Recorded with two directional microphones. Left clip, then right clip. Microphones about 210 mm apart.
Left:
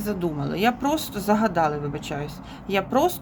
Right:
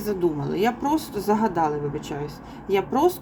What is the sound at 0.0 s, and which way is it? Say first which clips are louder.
Speech: right 3 dB; 10° left (ahead or behind).